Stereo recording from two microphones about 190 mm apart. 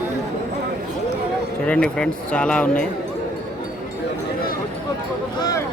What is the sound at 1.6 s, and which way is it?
Speech, 5° left (ahead or behind).